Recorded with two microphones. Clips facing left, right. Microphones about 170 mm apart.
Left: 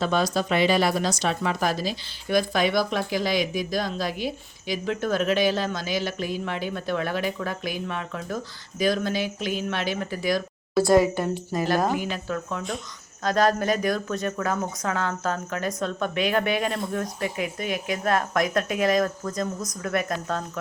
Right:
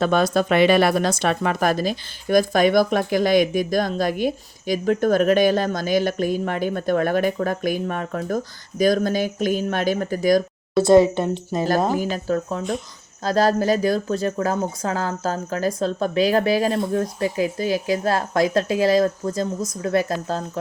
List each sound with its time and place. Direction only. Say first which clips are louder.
0.0 s speech: right 5 dB; 55° right (ahead or behind)
10.8 s speech: right 6 dB; 25° right (ahead or behind)
11.8 s speech: right 4 dB; 35° right (ahead or behind)